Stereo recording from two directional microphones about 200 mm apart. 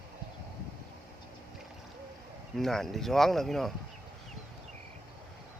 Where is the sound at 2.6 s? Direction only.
Centre (ahead or behind).